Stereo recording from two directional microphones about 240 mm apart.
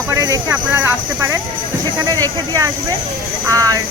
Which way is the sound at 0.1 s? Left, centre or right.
Centre.